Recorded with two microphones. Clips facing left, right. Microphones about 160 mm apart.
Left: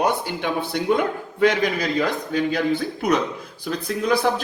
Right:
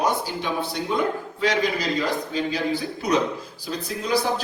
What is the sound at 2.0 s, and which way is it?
A man's voice, 55° left (ahead or behind).